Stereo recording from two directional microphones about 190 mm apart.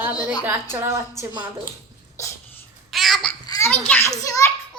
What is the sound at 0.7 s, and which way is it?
Speech, 15° right (ahead or behind).